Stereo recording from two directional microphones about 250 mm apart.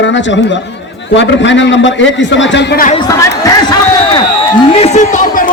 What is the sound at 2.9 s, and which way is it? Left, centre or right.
A man's voice, centre.